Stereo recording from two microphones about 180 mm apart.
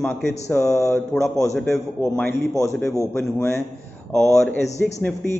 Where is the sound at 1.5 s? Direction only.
Centre (ahead or behind).